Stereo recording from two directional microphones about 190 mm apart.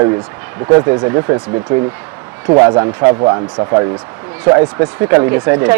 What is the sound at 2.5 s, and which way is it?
Speech, 20° right (ahead or behind).